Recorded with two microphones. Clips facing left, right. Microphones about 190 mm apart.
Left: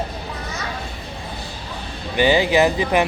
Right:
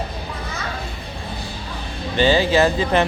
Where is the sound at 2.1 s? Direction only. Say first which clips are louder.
Even; 15° left (ahead or behind).